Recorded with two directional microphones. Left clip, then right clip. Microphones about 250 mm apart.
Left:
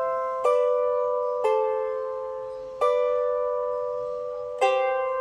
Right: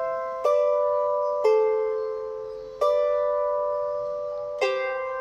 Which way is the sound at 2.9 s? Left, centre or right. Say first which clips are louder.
Right 1 dB; left.